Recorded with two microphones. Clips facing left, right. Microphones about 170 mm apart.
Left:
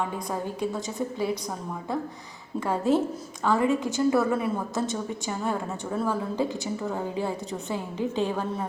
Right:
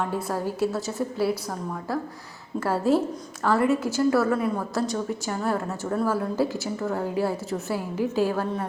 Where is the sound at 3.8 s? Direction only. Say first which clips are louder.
Right 1 dB; 20° left (ahead or behind).